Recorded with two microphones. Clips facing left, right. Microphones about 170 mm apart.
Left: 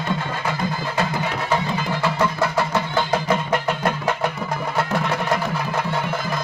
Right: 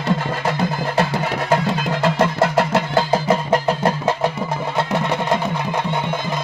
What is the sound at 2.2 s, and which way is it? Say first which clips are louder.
Music: right 4 dB; 70° right (ahead or behind).